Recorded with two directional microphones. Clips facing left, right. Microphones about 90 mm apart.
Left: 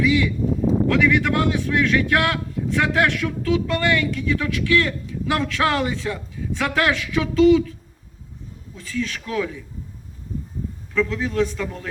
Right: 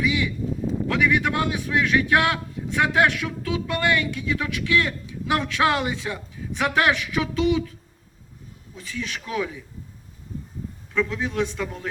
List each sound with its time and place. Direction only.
0.0 s a sound: 15° right (ahead or behind)
0.9 s a man's voice: 15° right (ahead or behind)
8.7 s a man's voice: 15° right (ahead or behind)
10.9 s a man's voice: 15° right (ahead or behind)